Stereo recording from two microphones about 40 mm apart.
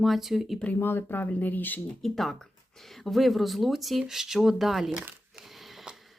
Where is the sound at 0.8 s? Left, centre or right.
Left.